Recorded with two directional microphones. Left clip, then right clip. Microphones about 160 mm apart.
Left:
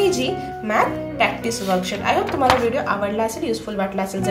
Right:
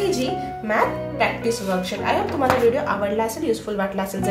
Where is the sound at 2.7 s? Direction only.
10° left (ahead or behind).